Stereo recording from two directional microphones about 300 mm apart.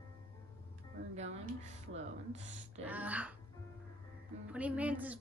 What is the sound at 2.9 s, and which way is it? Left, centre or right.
Speech, centre.